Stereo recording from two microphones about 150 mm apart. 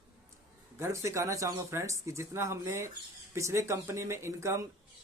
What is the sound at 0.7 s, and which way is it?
Speech, 20° right (ahead or behind).